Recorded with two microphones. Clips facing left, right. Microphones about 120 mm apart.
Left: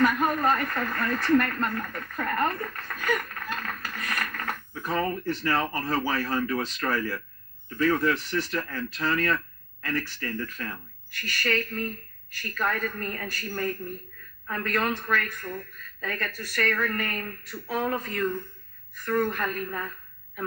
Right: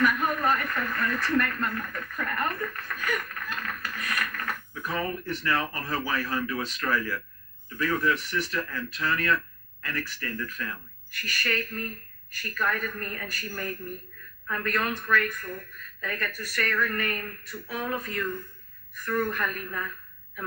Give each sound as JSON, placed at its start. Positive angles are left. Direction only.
{"t": 0.0, "sound": "speech", "side_deg": 30}